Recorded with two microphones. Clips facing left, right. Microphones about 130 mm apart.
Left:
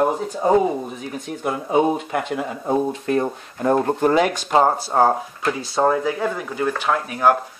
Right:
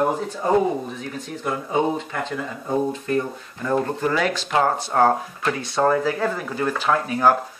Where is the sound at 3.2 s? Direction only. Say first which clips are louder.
Left 3 dB; 50° left (ahead or behind).